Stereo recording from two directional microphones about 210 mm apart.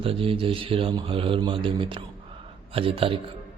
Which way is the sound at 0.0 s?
25° right (ahead or behind).